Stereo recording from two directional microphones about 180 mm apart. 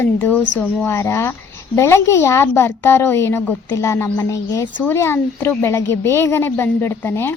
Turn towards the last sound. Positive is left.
turn(degrees=10)  # may be behind; listen again after turning